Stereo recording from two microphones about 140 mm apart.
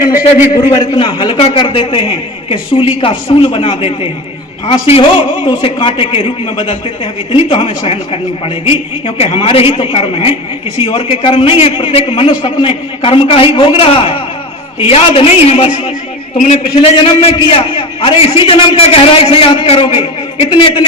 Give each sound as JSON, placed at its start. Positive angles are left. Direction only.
{"t": 0.1, "sound": "a man's voice", "side_deg": -15}
{"t": 0.5, "sound": "a man's voice", "side_deg": 30}